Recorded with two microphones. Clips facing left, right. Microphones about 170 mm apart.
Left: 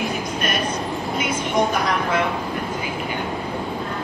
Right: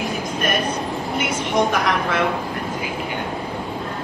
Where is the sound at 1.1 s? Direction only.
85° right.